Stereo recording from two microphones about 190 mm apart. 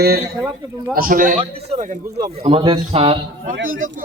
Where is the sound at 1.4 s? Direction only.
35° right (ahead or behind).